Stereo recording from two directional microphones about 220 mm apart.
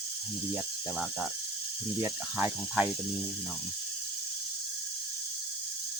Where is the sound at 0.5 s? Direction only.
5° right (ahead or behind).